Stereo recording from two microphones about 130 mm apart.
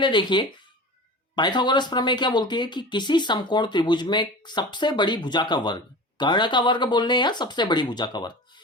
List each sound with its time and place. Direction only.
0.0 s speech: 35° left (ahead or behind)